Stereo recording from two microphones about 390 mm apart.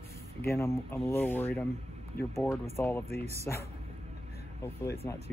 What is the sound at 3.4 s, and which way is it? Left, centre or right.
Speech, centre.